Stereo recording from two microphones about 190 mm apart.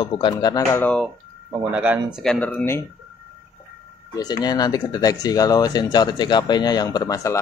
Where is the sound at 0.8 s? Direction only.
5° left (ahead or behind).